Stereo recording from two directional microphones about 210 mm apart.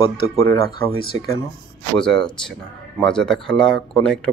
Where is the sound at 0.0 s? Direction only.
20° left (ahead or behind).